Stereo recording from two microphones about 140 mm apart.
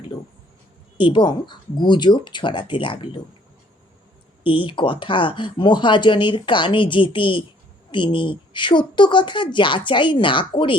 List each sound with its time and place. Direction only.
0.9 s speech: 35° left (ahead or behind)
4.4 s speech: 35° left (ahead or behind)